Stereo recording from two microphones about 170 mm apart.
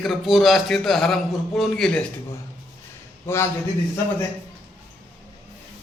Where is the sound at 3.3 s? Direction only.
15° left (ahead or behind).